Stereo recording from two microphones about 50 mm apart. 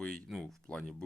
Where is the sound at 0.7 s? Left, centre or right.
Left.